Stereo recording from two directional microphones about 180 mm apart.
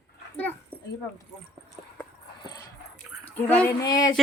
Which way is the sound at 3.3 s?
10° left (ahead or behind).